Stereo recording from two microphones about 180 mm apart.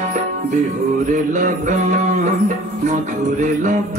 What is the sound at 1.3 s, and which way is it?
Music, 45° right (ahead or behind).